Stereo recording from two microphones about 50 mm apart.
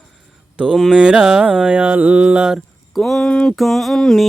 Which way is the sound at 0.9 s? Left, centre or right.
Centre.